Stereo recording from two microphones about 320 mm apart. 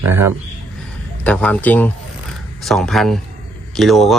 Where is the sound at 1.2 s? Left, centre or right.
Centre.